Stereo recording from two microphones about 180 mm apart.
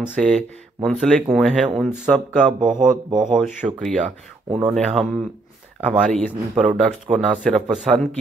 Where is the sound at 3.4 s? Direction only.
45° right (ahead or behind).